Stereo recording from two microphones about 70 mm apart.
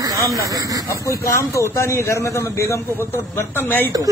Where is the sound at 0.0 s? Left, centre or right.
Right.